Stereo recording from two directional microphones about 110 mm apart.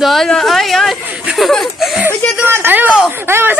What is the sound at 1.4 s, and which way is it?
Speech, centre (ahead or behind).